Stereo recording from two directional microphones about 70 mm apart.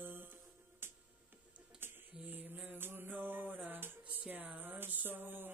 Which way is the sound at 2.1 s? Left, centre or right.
Right.